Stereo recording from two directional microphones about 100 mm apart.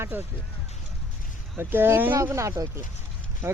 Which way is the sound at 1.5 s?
20° right (ahead or behind).